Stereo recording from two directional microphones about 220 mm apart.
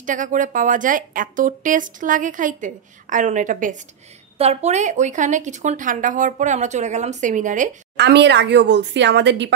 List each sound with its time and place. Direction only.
0.0 s speech: 35° right (ahead or behind)
8.0 s speech: 50° right (ahead or behind)